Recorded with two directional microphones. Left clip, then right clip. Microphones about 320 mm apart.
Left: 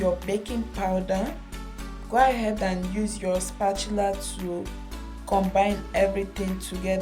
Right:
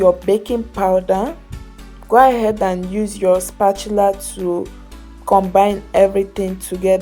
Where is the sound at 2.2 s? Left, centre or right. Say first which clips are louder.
Right 9 dB; centre.